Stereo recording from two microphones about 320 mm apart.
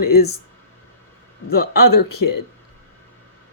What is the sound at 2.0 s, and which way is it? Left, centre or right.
Speech, left.